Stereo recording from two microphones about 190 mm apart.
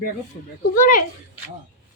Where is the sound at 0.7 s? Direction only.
50° left (ahead or behind).